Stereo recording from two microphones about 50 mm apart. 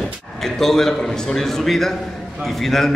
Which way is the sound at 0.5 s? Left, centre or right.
Centre.